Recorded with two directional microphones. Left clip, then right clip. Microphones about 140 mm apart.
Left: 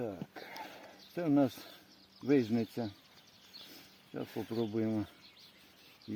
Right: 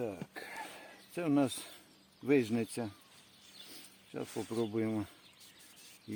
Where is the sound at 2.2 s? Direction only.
30° left (ahead or behind).